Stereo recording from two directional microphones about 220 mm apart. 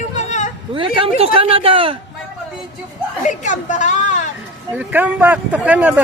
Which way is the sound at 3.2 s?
35° left (ahead or behind).